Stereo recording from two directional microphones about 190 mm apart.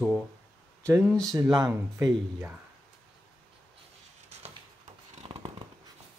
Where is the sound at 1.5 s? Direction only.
20° right (ahead or behind).